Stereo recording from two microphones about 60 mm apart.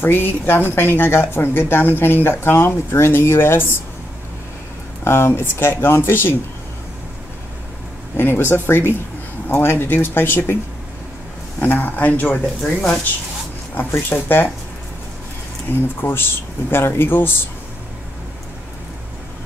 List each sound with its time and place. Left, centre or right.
0.0 s speech: left
5.0 s speech: left
8.2 s speech: left
11.6 s speech: left
13.7 s speech: left
15.7 s speech: left